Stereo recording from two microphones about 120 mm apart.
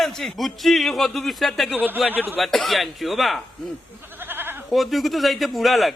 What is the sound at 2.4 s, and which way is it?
A man's voice, centre (ahead or behind).